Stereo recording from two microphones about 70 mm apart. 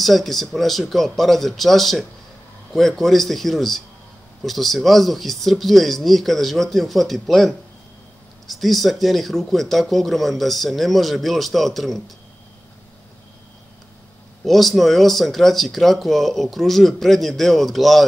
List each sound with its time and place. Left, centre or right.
0.0 s speech: centre
14.4 s speech: centre